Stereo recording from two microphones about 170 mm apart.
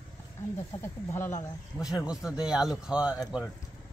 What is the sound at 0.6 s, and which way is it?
Speech, 15° left (ahead or behind).